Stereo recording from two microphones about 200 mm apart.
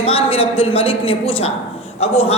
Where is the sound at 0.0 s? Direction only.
30° left (ahead or behind).